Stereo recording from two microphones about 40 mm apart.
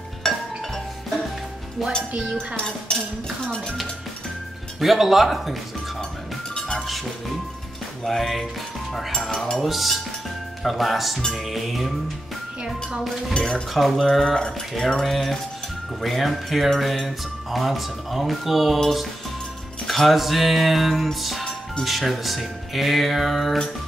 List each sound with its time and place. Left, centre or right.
0.2 s music: centre
2.3 s cutlery: centre
4.7 s speech: centre
8.0 s speech: centre
9.6 s speech: centre
13.4 s speech: centre
14.2 s music: centre
16.0 s speech: centre
19.9 s speech: centre